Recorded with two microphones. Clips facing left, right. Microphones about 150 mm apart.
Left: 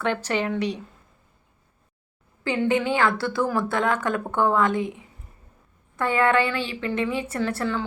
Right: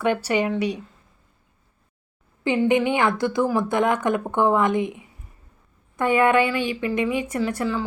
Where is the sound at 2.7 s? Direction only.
20° right (ahead or behind).